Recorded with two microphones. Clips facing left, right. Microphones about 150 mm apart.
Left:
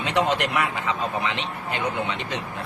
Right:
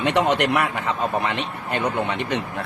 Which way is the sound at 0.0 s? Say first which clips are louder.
Right 3 dB; 65° right (ahead or behind).